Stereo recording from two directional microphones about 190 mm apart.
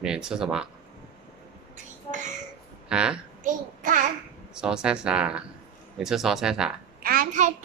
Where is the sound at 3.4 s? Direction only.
40° right (ahead or behind).